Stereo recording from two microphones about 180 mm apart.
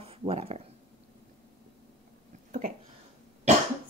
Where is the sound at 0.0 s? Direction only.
30° right (ahead or behind).